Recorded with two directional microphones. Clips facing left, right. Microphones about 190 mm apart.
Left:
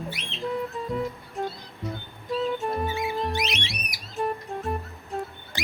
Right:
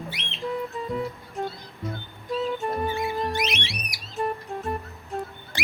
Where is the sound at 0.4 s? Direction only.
Centre (ahead or behind).